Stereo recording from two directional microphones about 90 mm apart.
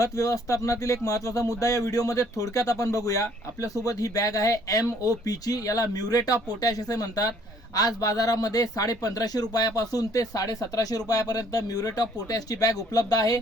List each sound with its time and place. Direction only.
0.0 s speech: 40° left (ahead or behind)